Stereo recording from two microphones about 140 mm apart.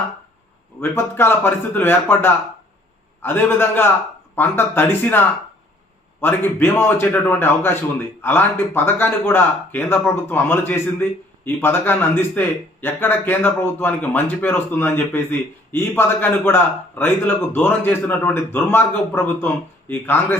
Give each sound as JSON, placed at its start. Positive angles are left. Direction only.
{"t": 0.8, "sound": "speech", "side_deg": 15}